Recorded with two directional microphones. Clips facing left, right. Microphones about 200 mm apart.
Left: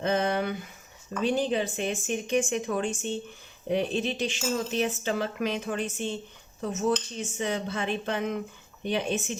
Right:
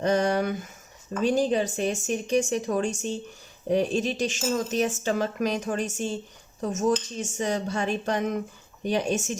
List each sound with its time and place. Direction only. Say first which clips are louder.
0.0 s speech: right 3 dB; 40° right (ahead or behind)